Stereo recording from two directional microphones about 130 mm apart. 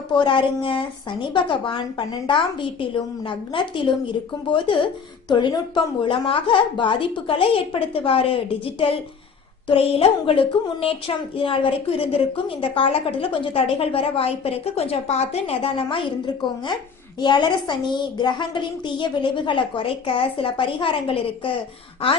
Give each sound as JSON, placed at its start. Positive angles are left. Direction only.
{"t": 0.1, "sound": "a woman's voice", "side_deg": 40}